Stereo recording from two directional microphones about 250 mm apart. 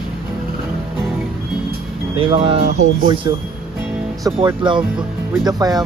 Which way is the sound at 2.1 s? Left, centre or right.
Right.